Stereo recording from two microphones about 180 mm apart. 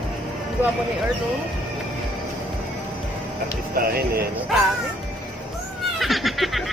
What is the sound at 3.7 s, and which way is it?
Speech, 55° right (ahead or behind).